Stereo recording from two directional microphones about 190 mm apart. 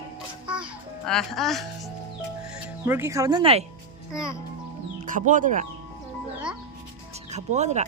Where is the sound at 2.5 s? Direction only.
10° right (ahead or behind); by 3.6 s 30° right (ahead or behind).